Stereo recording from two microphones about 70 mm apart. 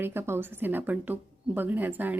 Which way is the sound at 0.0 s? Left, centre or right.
Right.